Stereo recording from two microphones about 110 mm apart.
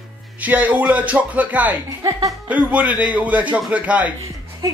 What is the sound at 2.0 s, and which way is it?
Speech, 30° right (ahead or behind).